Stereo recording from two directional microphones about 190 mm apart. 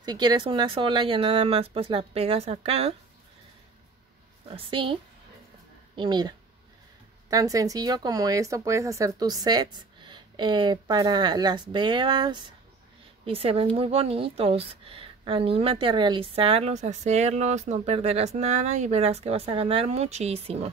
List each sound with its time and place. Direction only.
0.0 s speech: 20° right (ahead or behind)
4.5 s speech: 30° right (ahead or behind)
5.9 s a woman's voice: 25° right (ahead or behind)